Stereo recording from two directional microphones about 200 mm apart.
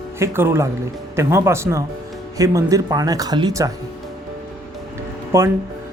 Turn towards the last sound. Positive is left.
turn(degrees=-15)  # may be behind; listen again after turning